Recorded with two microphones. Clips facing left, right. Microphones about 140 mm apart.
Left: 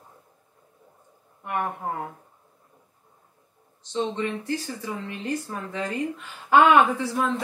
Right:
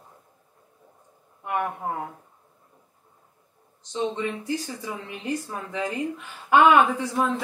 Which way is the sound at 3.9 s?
15° right (ahead or behind).